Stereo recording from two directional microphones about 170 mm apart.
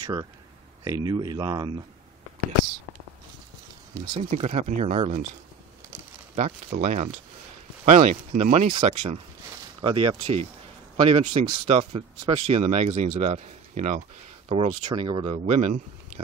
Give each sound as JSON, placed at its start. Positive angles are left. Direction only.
{"t": 0.0, "sound": "speech", "side_deg": -20}
{"t": 3.9, "sound": "speech", "side_deg": -25}
{"t": 4.2, "sound": "speech", "side_deg": -40}
{"t": 6.7, "sound": "speech", "side_deg": -50}
{"t": 14.5, "sound": "speech", "side_deg": -35}